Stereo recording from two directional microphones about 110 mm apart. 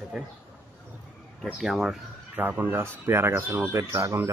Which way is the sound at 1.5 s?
Centre (ahead or behind).